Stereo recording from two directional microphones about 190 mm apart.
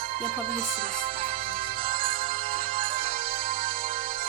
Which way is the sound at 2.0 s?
50° right (ahead or behind).